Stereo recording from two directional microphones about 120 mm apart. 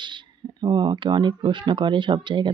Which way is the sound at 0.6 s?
40° right (ahead or behind).